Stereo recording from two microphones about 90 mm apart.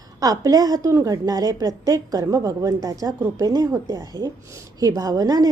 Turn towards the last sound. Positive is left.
turn(degrees=-40)  # may be behind; listen again after turning